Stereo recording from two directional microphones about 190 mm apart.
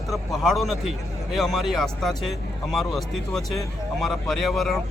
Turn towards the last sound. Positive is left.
turn(degrees=0)  # may be behind; listen again after turning